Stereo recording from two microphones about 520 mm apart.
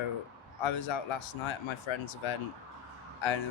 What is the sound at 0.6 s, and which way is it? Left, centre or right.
Speech, left.